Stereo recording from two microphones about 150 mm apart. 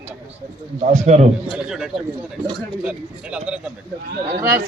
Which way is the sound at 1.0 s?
50° right (ahead or behind).